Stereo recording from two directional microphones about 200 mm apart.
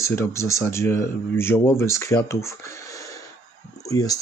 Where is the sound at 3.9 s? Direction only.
15° left (ahead or behind).